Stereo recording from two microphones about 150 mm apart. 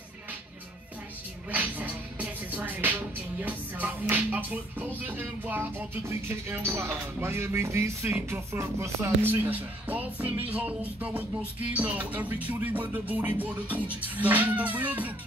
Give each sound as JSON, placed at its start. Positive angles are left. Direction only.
{"t": 1.5, "sound": "music", "side_deg": -10}